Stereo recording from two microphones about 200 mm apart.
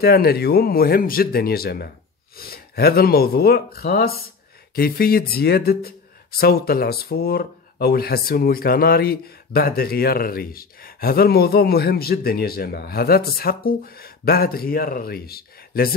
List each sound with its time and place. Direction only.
0.0 s speech: 50° left (ahead or behind)